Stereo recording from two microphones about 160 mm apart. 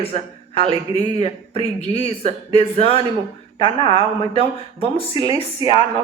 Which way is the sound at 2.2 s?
40° left (ahead or behind).